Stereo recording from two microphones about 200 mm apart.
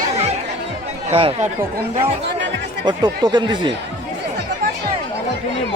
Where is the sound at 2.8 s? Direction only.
20° right (ahead or behind).